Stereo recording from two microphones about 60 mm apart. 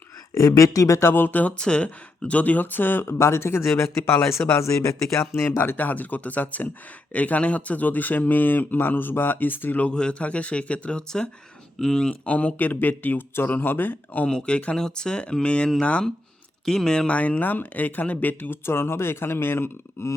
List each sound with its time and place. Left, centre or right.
0.3 s speech: left
1.1 s speech: left
1.5 s speech: centre; by 4.2 s left
4.5 s speech: left
5.5 s speech: left
9.8 s speech: centre
14.3 s speech: centre
17.1 s speech: left
18.6 s speech: left